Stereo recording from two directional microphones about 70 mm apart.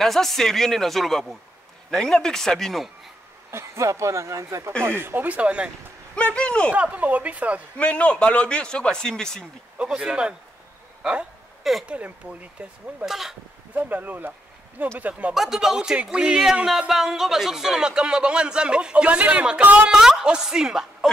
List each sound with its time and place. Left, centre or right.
0.0 s speech: centre
3.5 s speech: right
4.8 s speech: right; by 5.7 s centre
6.1 s speech: centre
6.7 s speech: right
7.7 s speech: centre
9.8 s speech: centre
11.0 s a sound: centre
11.8 s speech: centre
13.0 s speech: centre
13.7 s speech: right
15.3 s speech: centre
19.9 s speech: centre